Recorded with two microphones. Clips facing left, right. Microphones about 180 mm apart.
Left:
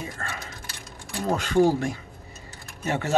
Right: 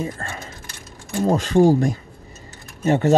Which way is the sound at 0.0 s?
35° right (ahead or behind).